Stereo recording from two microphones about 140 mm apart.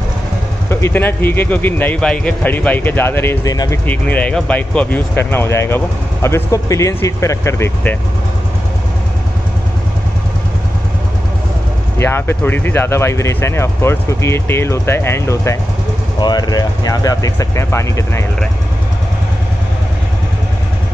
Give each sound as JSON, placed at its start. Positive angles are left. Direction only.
{"t": 0.7, "sound": "speech", "side_deg": 20}
{"t": 3.8, "sound": "speech", "side_deg": 10}
{"t": 12.0, "sound": "speech", "side_deg": 15}